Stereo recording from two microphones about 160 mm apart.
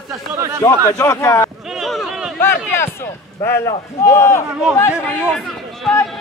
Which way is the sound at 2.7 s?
15° left (ahead or behind).